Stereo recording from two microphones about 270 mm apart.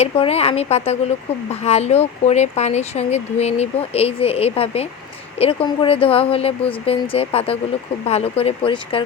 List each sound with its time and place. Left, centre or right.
0.0 s speech: left